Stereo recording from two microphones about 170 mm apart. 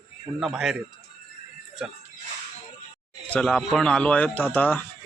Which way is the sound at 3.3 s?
5° left (ahead or behind).